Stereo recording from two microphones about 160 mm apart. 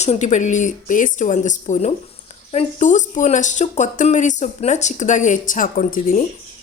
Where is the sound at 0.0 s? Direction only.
45° left (ahead or behind).